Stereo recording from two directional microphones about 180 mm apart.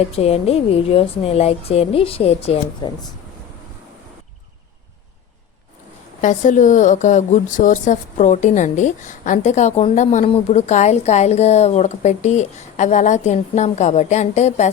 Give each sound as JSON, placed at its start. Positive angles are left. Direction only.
{"t": 0.1, "sound": "a woman's voice", "side_deg": 35}
{"t": 6.2, "sound": "a woman's voice", "side_deg": 45}